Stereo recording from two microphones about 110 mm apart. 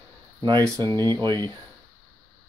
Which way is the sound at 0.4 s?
40° right (ahead or behind).